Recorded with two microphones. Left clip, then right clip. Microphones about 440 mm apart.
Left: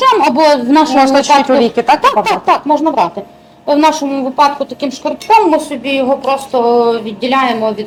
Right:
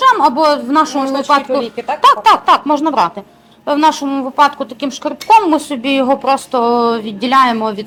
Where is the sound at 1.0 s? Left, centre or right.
Left.